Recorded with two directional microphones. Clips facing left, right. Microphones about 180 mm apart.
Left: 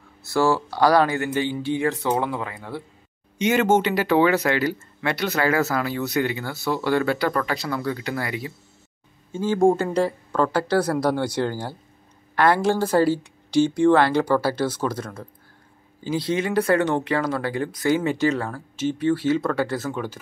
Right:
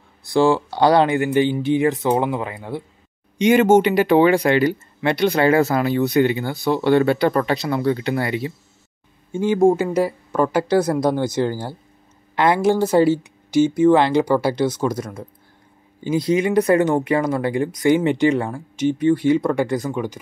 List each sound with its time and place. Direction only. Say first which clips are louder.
0.3 s speech: right 4 dB; 20° right (ahead or behind)
9.3 s speech: right 4 dB; 15° right (ahead or behind)
9.6 s speech: right 2 dB; centre (ahead or behind)
12.4 s speech: right 3 dB; 15° right (ahead or behind)
13.7 s speech: right 3 dB; 5° right (ahead or behind)
16.3 s speech: right 4 dB; 15° right (ahead or behind)